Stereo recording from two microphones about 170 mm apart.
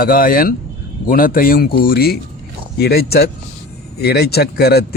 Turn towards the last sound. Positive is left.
turn(degrees=65)  # may be behind; listen again after turning